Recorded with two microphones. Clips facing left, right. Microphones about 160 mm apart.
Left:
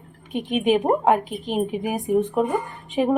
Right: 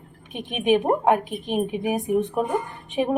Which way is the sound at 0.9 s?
Centre (ahead or behind).